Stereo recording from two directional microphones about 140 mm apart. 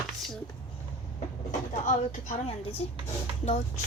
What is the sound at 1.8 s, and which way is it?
Speech, 65° left (ahead or behind).